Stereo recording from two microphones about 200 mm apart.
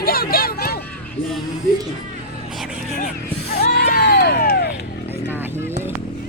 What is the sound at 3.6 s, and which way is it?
Music, 50° left (ahead or behind).